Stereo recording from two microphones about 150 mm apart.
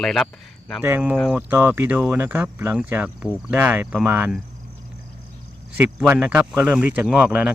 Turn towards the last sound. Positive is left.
turn(degrees=-10)  # may be behind; listen again after turning